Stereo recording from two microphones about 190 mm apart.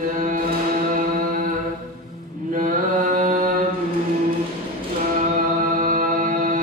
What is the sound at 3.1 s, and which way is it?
Mantra, 45° right (ahead or behind).